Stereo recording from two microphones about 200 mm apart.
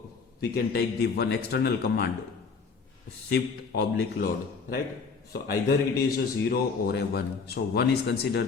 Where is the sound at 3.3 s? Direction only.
55° left (ahead or behind).